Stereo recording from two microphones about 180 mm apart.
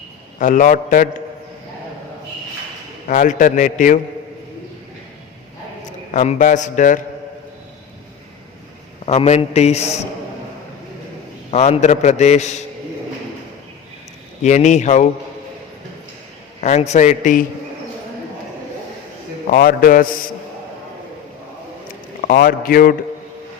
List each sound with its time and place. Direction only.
0.3 s a man's voice: 45° left (ahead or behind)
3.1 s a man's voice: 45° left (ahead or behind)
6.1 s a man's voice: 40° left (ahead or behind)
9.0 s a man's voice: 35° left (ahead or behind)
11.5 s a man's voice: 40° left (ahead or behind)
14.4 s a man's voice: 40° left (ahead or behind)
16.6 s a man's voice: 40° left (ahead or behind)
19.5 s a man's voice: 50° left (ahead or behind)
22.2 s a man's voice: 55° left (ahead or behind)